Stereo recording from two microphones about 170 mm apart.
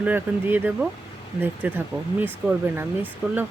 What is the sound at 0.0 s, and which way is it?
Speech, 10° right (ahead or behind).